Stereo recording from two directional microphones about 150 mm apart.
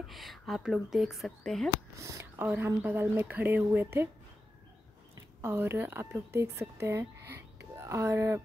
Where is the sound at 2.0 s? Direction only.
20° right (ahead or behind).